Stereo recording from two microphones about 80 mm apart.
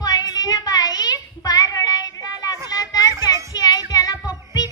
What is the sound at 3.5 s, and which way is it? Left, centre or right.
Child singing, left.